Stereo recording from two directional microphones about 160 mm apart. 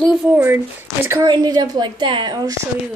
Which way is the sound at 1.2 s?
25° right (ahead or behind).